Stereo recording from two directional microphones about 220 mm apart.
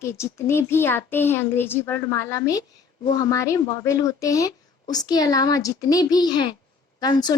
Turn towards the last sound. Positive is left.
turn(degrees=20)  # may be behind; listen again after turning